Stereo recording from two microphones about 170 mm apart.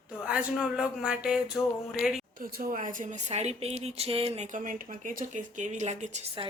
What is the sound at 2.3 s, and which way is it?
Speech, 55° right (ahead or behind).